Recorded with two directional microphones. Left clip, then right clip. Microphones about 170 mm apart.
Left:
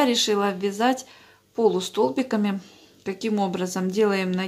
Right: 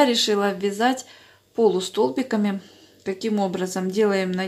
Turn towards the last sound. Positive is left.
turn(degrees=0)  # may be behind; listen again after turning